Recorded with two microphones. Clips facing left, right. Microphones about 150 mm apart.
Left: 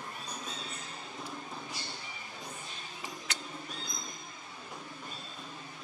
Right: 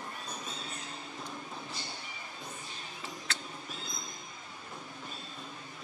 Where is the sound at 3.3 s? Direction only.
15° left (ahead or behind).